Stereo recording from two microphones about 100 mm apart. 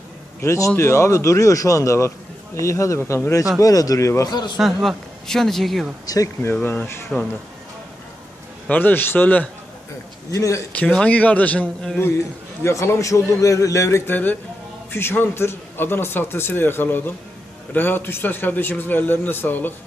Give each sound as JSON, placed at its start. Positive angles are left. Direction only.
{"t": 0.4, "sound": "a man's voice", "side_deg": 30}
{"t": 3.6, "sound": "speech", "side_deg": 35}
{"t": 4.3, "sound": "a man's voice", "side_deg": 45}
{"t": 4.5, "sound": "speech", "side_deg": 0}
{"t": 6.1, "sound": "a man's voice", "side_deg": 30}
{"t": 7.1, "sound": "speech", "side_deg": 10}
{"t": 8.7, "sound": "speech", "side_deg": 20}
{"t": 10.3, "sound": "speech", "side_deg": 30}
{"t": 10.7, "sound": "speech", "side_deg": 10}
{"t": 12.6, "sound": "speech", "side_deg": 25}
{"t": 14.1, "sound": "a man's voice", "side_deg": 20}